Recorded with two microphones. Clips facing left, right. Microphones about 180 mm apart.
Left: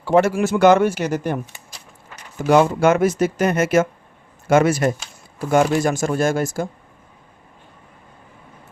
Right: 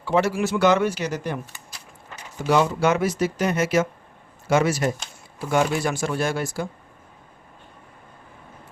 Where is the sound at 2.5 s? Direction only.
50° left (ahead or behind).